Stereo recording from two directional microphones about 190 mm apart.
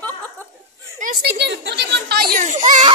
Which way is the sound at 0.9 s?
50° right (ahead or behind).